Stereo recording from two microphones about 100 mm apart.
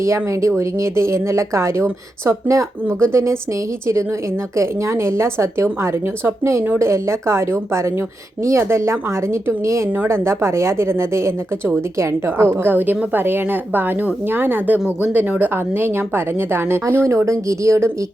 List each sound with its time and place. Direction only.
0.0 s speech: 30° right (ahead or behind)